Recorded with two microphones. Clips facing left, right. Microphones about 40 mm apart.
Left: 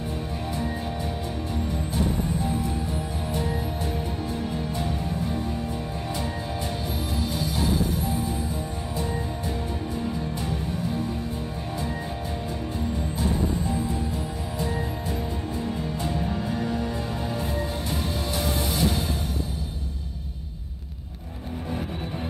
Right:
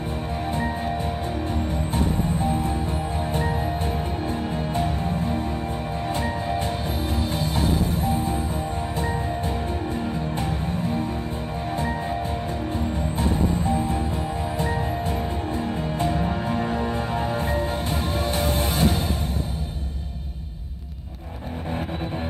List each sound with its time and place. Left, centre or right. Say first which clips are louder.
2.0 s music: right 2 dB; right
7.2 s music: right 1 dB; right
10.4 s music: right 3 dB; right
13.2 s music: right 3 dB; right